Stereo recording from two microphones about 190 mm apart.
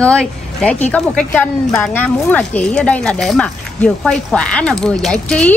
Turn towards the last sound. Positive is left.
turn(degrees=5)  # may be behind; listen again after turning